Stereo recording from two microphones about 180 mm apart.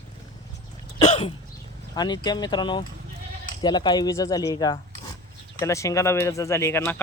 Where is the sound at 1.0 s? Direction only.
35° left (ahead or behind).